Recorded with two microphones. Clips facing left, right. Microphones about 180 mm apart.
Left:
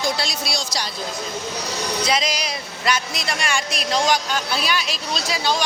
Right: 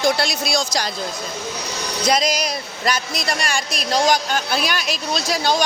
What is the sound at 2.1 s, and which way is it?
Speech, 40° right (ahead or behind).